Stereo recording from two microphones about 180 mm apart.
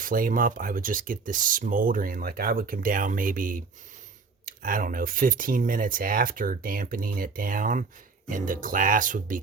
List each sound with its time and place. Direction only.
0.0 s speech: 50° right (ahead or behind)